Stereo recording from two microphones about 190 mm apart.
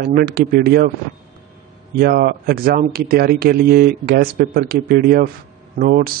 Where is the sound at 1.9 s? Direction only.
55° right (ahead or behind).